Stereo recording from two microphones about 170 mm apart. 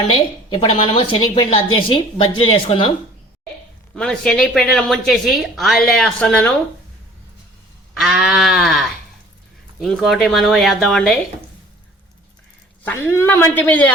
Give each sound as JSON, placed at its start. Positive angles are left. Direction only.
{"t": 0.5, "sound": "a woman's voice", "side_deg": 30}
{"t": 3.9, "sound": "a woman's voice", "side_deg": 5}
{"t": 7.9, "sound": "a woman's voice", "side_deg": 0}
{"t": 12.8, "sound": "a woman's voice", "side_deg": 15}